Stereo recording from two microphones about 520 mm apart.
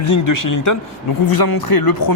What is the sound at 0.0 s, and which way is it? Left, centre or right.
Speech, left.